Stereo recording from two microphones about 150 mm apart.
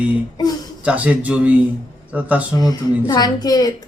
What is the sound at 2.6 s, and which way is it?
Speech, 25° left (ahead or behind).